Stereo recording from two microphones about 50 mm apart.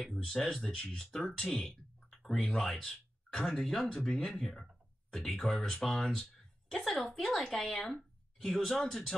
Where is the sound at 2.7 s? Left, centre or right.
Centre.